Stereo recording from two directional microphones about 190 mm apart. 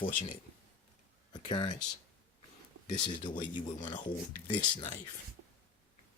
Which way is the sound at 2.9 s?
25° left (ahead or behind).